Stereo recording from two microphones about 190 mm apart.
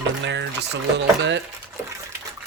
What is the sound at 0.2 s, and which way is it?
Speech, 70° right (ahead or behind).